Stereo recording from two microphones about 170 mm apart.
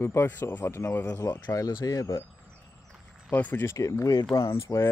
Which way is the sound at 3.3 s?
10° left (ahead or behind).